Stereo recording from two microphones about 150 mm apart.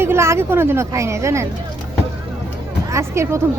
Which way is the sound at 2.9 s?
20° right (ahead or behind).